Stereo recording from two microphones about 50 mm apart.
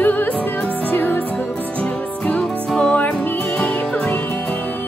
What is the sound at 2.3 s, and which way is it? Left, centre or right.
Music, centre.